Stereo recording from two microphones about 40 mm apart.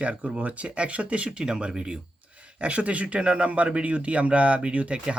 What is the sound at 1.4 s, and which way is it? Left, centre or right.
Speech, centre.